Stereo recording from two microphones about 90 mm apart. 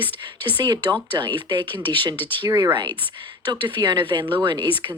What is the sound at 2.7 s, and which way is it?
Speech, 60° right (ahead or behind).